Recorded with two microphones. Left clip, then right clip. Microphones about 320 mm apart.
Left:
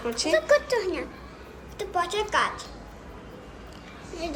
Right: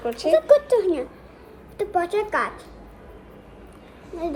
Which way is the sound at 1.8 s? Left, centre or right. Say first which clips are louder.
Right 4 dB; centre.